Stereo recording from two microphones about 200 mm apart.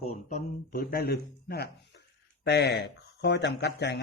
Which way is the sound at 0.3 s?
45° left (ahead or behind).